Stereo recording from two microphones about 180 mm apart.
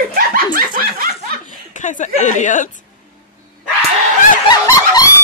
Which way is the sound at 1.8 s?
45° left (ahead or behind).